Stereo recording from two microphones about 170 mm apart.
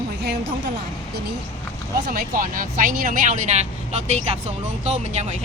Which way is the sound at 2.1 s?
55° right (ahead or behind).